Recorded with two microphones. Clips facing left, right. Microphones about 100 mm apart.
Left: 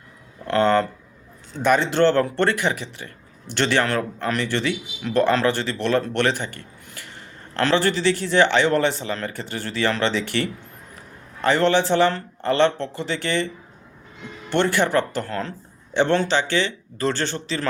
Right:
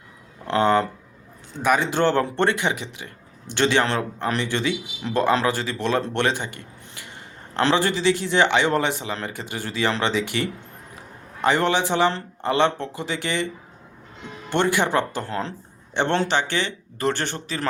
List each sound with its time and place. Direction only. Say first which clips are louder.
0.4 s speech: left 1 dB; 15° right (ahead or behind)
14.5 s speech: left 1 dB; 15° right (ahead or behind)